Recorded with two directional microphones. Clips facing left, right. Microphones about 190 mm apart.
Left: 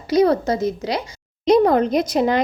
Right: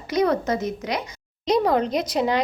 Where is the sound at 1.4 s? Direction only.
50° left (ahead or behind).